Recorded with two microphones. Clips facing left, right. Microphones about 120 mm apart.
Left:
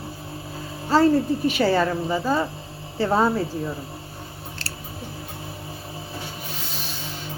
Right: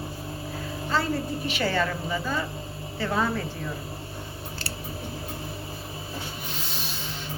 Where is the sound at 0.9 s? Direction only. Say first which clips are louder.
Left 10 dB; 40° left (ahead or behind).